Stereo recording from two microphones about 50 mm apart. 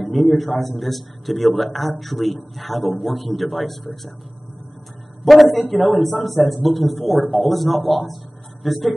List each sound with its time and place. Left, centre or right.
0.0 s a man's voice: centre
5.2 s a man's voice: centre